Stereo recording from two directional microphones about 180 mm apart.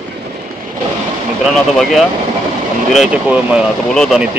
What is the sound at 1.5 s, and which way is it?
Speech, centre (ahead or behind).